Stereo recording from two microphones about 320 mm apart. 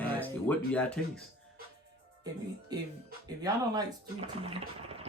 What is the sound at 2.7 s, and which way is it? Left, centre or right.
Speech, centre.